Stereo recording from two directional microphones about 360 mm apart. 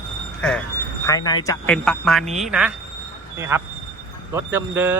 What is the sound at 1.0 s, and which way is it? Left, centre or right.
Speech, centre.